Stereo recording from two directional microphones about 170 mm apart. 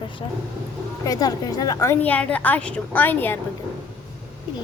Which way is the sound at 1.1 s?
20° left (ahead or behind).